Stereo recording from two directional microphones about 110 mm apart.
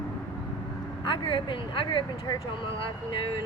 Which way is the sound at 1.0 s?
50° left (ahead or behind).